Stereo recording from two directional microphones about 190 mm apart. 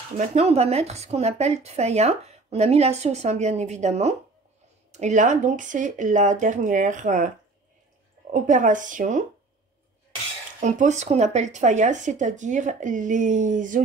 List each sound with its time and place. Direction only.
0.2 s a woman's voice: 35° right (ahead or behind)
8.3 s speech: 45° right (ahead or behind)
10.6 s a woman's voice: 40° right (ahead or behind)